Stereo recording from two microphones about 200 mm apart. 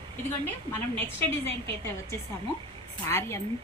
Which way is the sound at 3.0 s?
10° left (ahead or behind).